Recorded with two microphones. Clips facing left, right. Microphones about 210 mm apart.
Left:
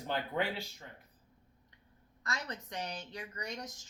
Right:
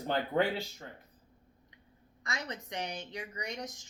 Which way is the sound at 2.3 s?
20° right (ahead or behind).